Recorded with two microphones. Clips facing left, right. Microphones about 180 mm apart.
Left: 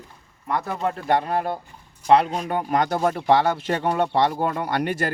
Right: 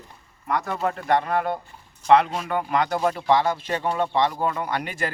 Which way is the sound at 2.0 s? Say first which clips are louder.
Even; 35° left (ahead or behind).